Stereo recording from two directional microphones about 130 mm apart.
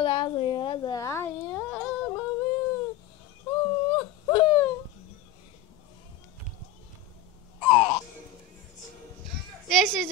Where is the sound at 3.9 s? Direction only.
30° left (ahead or behind).